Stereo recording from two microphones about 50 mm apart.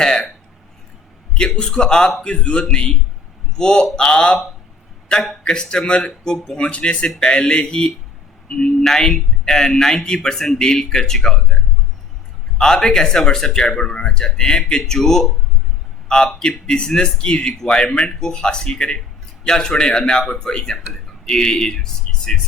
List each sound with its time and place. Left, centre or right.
0.0 s a man's voice: centre
1.3 s a man's voice: centre
5.2 s a man's voice: centre
5.5 s a man's voice: centre
6.6 s a man's voice: left
12.5 s a man's voice: centre